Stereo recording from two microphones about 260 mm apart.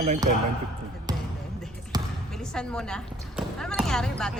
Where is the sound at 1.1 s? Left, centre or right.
Centre.